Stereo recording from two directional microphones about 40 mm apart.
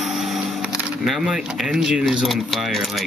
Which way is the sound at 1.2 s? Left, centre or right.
Centre.